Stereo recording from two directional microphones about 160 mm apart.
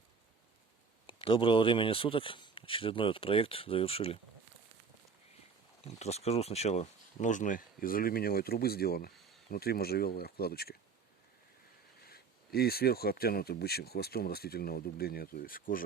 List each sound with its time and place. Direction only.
1.0 s speech: 35° left (ahead or behind)
6.0 s speech: 40° left (ahead or behind); by 10.8 s 75° left (ahead or behind)
12.0 s speech: 70° left (ahead or behind)